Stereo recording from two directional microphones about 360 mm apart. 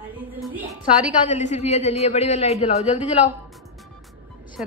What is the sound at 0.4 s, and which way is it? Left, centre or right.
Music, centre.